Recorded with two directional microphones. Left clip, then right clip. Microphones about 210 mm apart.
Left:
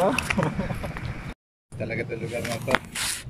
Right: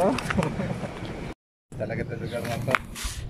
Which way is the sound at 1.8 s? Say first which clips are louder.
Left 1 dB; 5° left (ahead or behind).